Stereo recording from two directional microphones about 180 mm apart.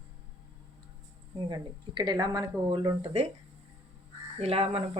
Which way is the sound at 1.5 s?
25° right (ahead or behind).